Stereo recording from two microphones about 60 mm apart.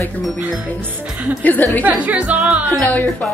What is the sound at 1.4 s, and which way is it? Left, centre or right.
Speech, left.